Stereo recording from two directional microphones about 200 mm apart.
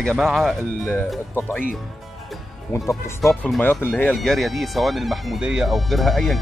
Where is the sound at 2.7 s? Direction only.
15° left (ahead or behind).